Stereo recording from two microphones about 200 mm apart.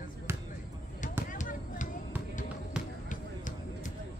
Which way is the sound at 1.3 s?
40° left (ahead or behind).